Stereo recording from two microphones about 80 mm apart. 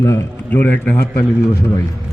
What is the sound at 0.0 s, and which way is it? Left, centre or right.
Speech, left.